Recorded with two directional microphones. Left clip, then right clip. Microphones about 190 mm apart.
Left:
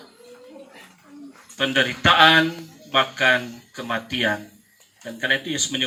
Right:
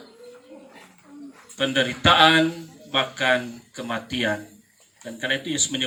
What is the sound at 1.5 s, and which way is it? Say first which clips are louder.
Speech: left 2 dB; 20° right (ahead or behind).